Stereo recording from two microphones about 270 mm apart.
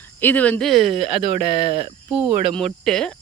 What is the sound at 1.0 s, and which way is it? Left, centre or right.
Speech, right.